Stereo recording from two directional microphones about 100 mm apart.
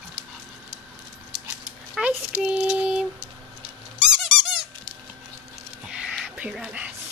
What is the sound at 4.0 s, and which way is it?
Squeak, 5° right (ahead or behind).